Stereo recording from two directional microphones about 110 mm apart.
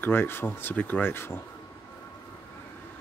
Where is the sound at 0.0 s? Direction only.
20° left (ahead or behind).